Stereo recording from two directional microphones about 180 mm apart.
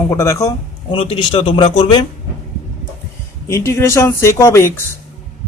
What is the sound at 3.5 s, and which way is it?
Speech, 15° left (ahead or behind).